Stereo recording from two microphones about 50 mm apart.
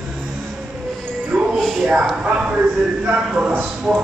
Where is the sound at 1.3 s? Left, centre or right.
Right.